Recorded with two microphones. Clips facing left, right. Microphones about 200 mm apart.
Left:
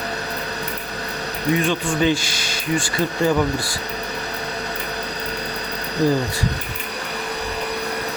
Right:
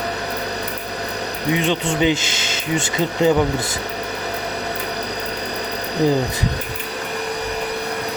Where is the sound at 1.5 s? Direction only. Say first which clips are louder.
Even; 20° right (ahead or behind).